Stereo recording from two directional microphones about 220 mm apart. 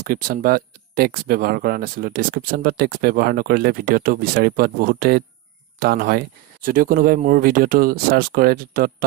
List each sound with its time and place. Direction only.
0.0 s speech: 40° right (ahead or behind)